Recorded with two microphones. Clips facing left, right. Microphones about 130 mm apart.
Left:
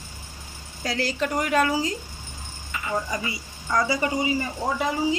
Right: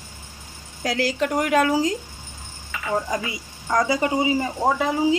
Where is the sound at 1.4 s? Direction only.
65° right (ahead or behind).